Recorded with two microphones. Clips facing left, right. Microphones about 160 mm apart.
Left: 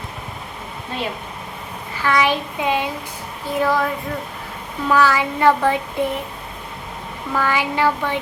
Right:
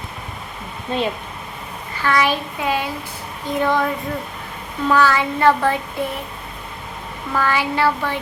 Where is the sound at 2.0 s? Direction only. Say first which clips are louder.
Even; 10° left (ahead or behind).